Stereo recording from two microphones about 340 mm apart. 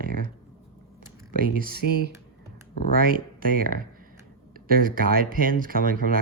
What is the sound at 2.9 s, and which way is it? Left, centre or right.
Speech, right.